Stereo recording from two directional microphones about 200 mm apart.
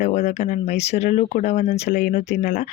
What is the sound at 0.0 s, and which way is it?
Speech, 35° left (ahead or behind).